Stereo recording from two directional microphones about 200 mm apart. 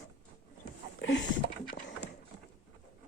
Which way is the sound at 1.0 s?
60° left (ahead or behind).